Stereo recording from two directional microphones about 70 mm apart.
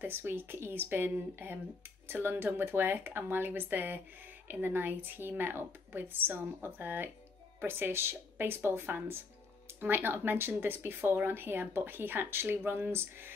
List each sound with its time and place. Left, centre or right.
0.0 s speech: right